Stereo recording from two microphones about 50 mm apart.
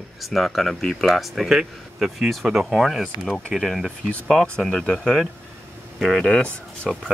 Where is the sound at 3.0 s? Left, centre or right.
Centre.